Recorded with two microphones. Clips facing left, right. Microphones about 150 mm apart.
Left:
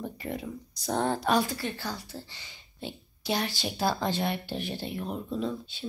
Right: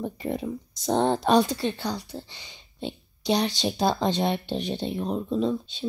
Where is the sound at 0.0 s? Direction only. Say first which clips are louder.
Right 6 dB; 20° right (ahead or behind).